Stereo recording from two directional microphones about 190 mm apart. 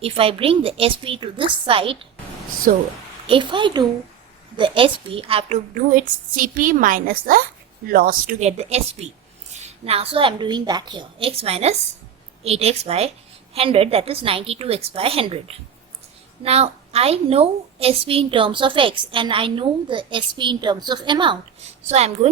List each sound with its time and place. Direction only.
0.0 s a woman's voice: 30° right (ahead or behind)
2.7 s a woman's voice: 45° right (ahead or behind)
3.2 s a woman's voice: 25° right (ahead or behind)
16.4 s a woman's voice: 35° right (ahead or behind)
21.8 s a woman's voice: 35° right (ahead or behind)